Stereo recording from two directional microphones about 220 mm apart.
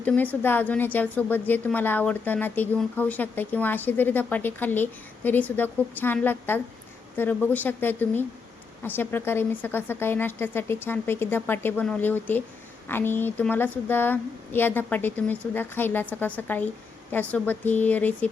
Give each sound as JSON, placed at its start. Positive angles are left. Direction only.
{"t": 0.0, "sound": "a woman's voice", "side_deg": 5}